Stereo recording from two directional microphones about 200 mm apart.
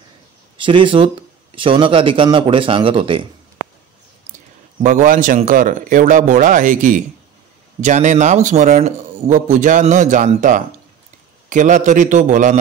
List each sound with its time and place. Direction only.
0.6 s a man's voice: 25° right (ahead or behind)
4.8 s a man's voice: 40° right (ahead or behind)